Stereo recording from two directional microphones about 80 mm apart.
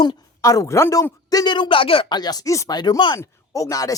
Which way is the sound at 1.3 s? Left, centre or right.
Left.